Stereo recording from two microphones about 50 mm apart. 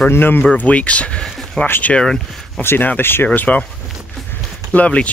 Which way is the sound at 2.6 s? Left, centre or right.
Left.